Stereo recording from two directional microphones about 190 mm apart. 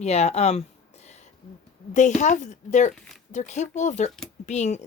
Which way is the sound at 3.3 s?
40° left (ahead or behind).